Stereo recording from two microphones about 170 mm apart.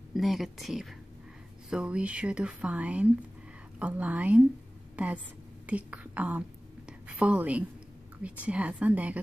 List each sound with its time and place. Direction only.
0.1 s a woman's voice: centre (ahead or behind)
6.9 s whispering: 5° right (ahead or behind)
8.2 s speech: 5° right (ahead or behind)